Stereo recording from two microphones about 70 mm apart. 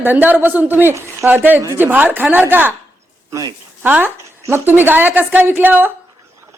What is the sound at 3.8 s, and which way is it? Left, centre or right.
A woman's voice, right.